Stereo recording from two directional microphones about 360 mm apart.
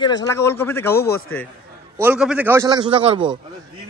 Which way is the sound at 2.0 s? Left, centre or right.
Centre.